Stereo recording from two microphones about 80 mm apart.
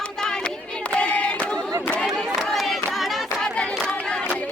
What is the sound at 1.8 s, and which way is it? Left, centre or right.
Crowd, centre.